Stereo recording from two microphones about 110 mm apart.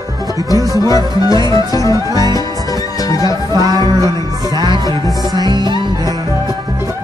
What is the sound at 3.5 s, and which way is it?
Music, 35° right (ahead or behind).